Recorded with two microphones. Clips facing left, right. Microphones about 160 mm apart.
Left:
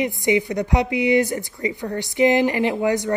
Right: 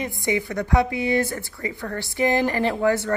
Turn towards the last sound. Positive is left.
turn(degrees=15)  # may be behind; listen again after turning